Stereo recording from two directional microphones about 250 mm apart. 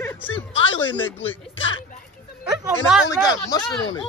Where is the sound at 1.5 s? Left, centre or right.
Left.